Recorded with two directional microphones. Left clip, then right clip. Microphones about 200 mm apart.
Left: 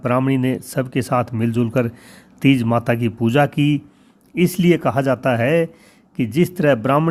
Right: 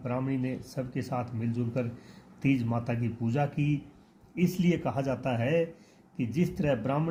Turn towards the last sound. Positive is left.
turn(degrees=45)  # may be behind; listen again after turning